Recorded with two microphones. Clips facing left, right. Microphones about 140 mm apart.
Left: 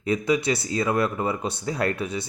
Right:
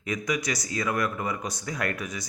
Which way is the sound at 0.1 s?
30° left (ahead or behind).